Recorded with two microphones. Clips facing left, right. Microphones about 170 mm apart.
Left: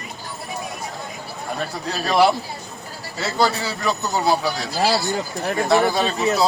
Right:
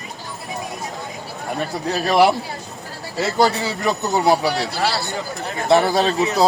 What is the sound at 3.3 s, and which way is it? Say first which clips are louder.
A man's voice: right 2 dB; 20° right (ahead or behind).